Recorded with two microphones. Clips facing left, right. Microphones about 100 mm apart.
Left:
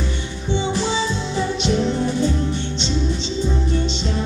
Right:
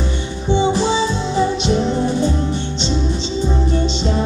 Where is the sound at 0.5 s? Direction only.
15° right (ahead or behind).